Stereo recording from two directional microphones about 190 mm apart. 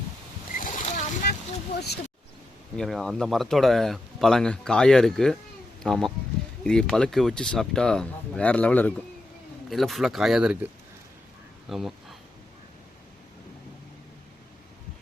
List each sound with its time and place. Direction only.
0.6 s boat: 40° left (ahead or behind)
2.7 s speech: centre (ahead or behind)
11.7 s speech: centre (ahead or behind)